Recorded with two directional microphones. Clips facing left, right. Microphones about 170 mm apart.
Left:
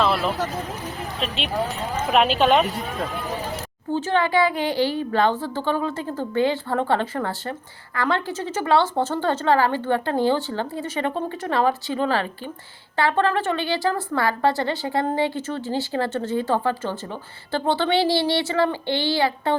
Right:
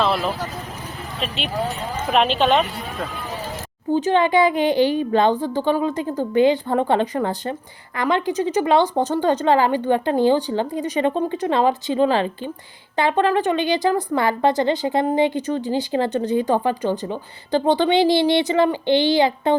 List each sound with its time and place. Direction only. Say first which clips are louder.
0.0 s vehicle: right 1 dB; centre (ahead or behind)
2.1 s a woman's voice: even; 5° left (ahead or behind)
3.9 s a woman's voice: right 4 dB; 15° right (ahead or behind)